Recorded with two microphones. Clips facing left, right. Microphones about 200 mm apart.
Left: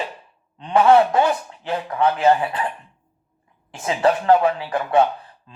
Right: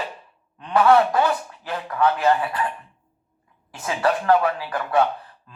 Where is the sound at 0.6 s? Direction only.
25° left (ahead or behind).